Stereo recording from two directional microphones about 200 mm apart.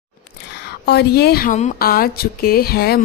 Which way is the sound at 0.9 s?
55° left (ahead or behind).